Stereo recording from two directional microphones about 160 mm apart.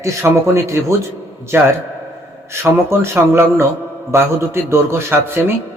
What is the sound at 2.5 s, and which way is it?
A man's voice, 15° right (ahead or behind).